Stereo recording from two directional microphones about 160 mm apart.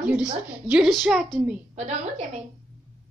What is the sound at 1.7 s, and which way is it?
Speech, 45° right (ahead or behind).